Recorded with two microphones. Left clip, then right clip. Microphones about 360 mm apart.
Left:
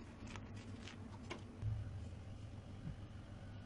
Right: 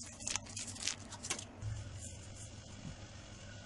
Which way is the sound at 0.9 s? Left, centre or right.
Right.